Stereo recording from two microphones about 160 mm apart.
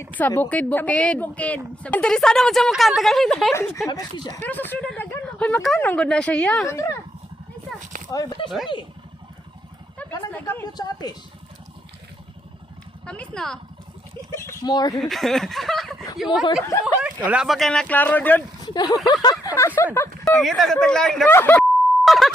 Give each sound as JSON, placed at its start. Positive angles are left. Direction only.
{"t": 0.0, "sound": "speech", "side_deg": 10}
{"t": 6.7, "sound": "a woman's voice", "side_deg": 20}
{"t": 8.1, "sound": "a woman's voice", "side_deg": 20}
{"t": 8.4, "sound": "speech", "side_deg": 0}
{"t": 10.4, "sound": "a woman's voice", "side_deg": 25}
{"t": 13.1, "sound": "speech", "side_deg": 5}
{"t": 14.3, "sound": "a woman's voice", "side_deg": 15}
{"t": 14.9, "sound": "speech", "side_deg": 0}
{"t": 18.6, "sound": "speech", "side_deg": 25}
{"t": 20.2, "sound": "speech", "side_deg": 0}
{"t": 22.0, "sound": "beep", "side_deg": 0}